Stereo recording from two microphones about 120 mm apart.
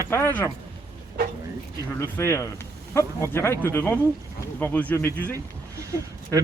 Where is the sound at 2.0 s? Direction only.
20° left (ahead or behind).